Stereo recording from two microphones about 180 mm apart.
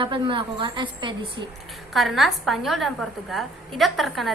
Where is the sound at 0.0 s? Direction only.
30° right (ahead or behind).